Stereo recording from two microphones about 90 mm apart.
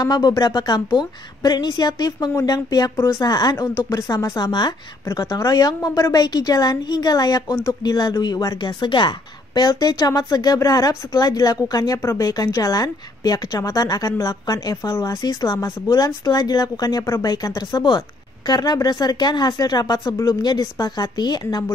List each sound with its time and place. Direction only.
0.0 s a woman's voice: 45° left (ahead or behind)
5.2 s speech: 40° left (ahead or behind)
12.0 s speech: 30° left (ahead or behind)
12.3 s a woman's voice: 40° left (ahead or behind)
17.0 s a woman's voice: 30° left (ahead or behind)